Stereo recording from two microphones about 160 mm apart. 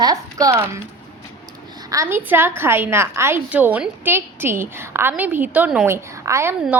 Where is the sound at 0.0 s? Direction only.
20° right (ahead or behind).